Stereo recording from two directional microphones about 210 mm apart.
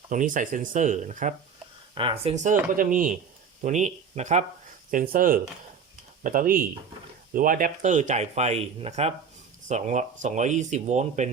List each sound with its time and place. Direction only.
0.1 s speech: 40° right (ahead or behind)